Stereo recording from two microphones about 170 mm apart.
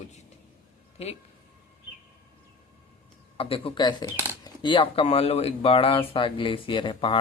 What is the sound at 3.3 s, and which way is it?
Speech, 35° left (ahead or behind).